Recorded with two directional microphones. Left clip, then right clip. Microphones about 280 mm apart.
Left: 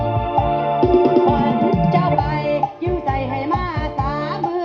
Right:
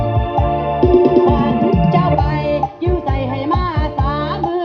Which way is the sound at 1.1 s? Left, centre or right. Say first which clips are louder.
Right 2 dB; left.